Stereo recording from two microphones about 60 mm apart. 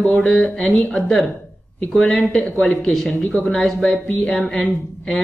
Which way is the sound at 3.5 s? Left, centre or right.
Centre.